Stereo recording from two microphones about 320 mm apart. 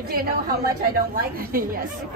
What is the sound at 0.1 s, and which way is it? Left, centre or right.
Speech, right.